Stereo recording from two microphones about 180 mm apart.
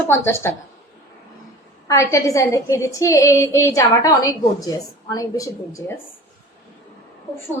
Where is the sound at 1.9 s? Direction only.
15° left (ahead or behind).